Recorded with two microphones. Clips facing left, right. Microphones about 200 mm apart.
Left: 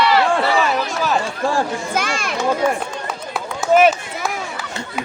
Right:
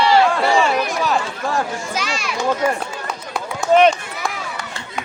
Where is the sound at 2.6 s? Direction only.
10° right (ahead or behind).